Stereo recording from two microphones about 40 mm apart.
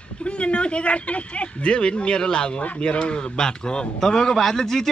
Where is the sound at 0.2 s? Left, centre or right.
Left.